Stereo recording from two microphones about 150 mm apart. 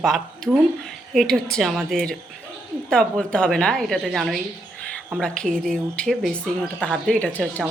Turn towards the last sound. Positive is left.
turn(degrees=10)  # may be behind; listen again after turning